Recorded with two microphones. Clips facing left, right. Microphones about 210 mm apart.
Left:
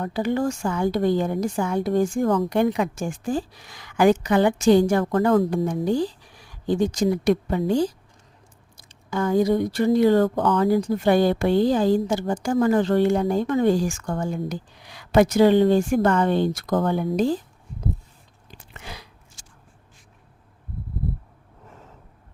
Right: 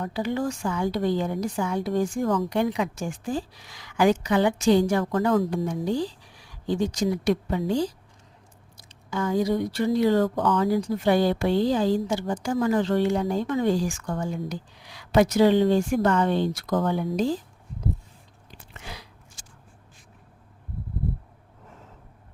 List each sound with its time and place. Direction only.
0.0 s speech: 50° left (ahead or behind)